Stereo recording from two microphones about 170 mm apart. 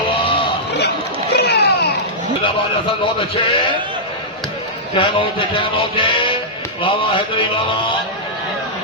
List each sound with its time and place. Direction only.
1.3 s a sound: 75° left (ahead or behind)
2.4 s a man's voice: 30° left (ahead or behind)
4.9 s music: 30° left (ahead or behind)